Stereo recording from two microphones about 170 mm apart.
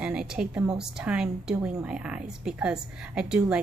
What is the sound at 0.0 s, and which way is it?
A woman's voice, 5° right (ahead or behind).